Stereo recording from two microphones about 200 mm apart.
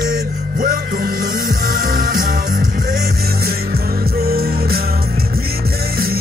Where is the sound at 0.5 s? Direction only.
45° right (ahead or behind).